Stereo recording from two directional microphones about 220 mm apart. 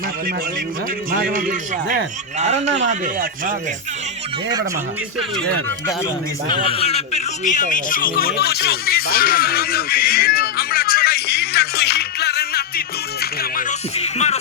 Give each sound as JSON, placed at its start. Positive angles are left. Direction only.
{"t": 1.1, "sound": "a man's voice", "side_deg": -35}
{"t": 6.7, "sound": "a sound", "side_deg": 25}
{"t": 13.4, "sound": "music", "side_deg": 35}